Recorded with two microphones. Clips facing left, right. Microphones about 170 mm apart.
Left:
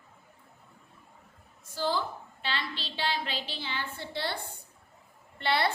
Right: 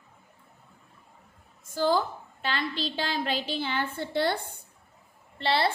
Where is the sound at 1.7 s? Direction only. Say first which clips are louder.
Right 5 dB; 50° right (ahead or behind).